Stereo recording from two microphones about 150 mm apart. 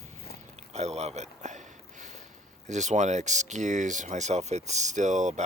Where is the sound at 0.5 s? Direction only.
45° right (ahead or behind).